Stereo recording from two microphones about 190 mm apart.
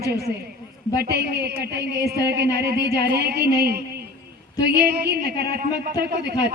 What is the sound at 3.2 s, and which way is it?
A woman's voice, 60° right (ahead or behind).